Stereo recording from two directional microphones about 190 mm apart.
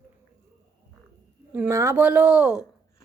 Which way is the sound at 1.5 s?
10° right (ahead or behind).